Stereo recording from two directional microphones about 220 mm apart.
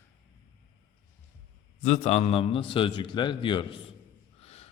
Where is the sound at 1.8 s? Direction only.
30° left (ahead or behind).